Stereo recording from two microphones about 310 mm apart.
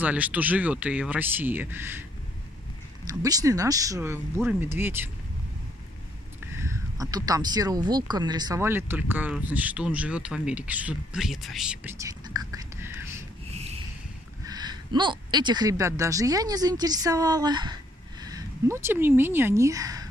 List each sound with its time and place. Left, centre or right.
0.0 s speech: centre
3.1 s speech: centre
6.6 s speech: centre
13.5 s a sound: centre
14.4 s a woman's voice: centre